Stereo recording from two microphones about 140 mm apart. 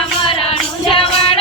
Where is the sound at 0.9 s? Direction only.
40° left (ahead or behind).